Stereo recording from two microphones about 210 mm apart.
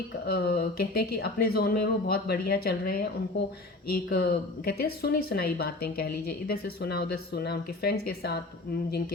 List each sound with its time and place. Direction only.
0.3 s speech: 45° left (ahead or behind)